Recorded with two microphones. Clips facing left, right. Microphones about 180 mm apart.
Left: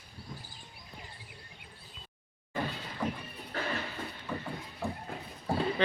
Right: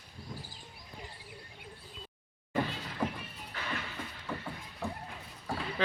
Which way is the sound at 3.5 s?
40° left (ahead or behind).